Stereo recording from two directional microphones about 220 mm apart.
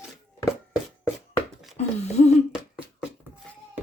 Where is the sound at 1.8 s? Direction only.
30° left (ahead or behind).